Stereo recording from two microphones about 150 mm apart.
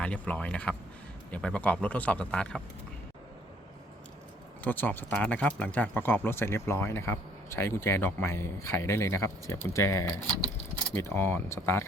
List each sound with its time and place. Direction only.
0.0 s speech: 10° left (ahead or behind)
4.6 s speech: 10° left (ahead or behind)